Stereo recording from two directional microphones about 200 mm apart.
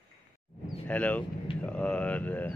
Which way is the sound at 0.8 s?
5° left (ahead or behind).